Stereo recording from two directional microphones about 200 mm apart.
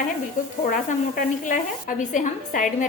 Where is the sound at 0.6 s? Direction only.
40° left (ahead or behind).